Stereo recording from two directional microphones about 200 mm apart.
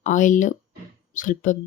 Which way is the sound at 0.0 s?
40° left (ahead or behind).